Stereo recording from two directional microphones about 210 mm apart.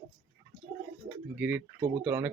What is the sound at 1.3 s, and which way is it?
Speech, 5° right (ahead or behind).